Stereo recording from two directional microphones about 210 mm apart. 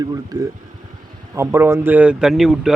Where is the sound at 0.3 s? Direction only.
20° right (ahead or behind).